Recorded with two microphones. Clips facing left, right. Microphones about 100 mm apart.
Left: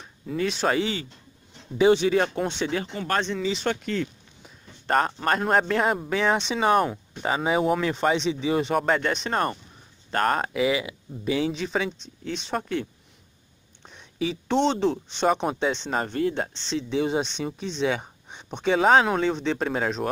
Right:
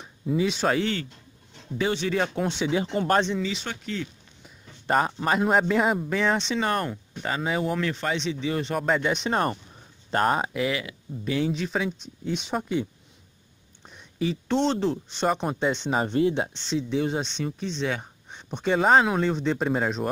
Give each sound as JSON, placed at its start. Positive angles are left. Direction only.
{"t": 0.0, "sound": "speech", "side_deg": -10}
{"t": 1.8, "sound": "speech", "side_deg": 15}
{"t": 2.1, "sound": "speech", "side_deg": 0}
{"t": 2.9, "sound": "speech", "side_deg": -30}
{"t": 3.6, "sound": "speech", "side_deg": 55}
{"t": 4.8, "sound": "speech", "side_deg": -10}
{"t": 9.1, "sound": "speech", "side_deg": -15}
{"t": 10.6, "sound": "speech", "side_deg": 10}
{"t": 13.8, "sound": "speech", "side_deg": 0}
{"t": 15.8, "sound": "speech", "side_deg": -10}
{"t": 16.6, "sound": "speech", "side_deg": 0}